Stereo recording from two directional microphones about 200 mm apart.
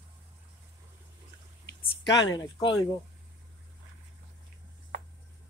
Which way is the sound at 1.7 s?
60° left (ahead or behind).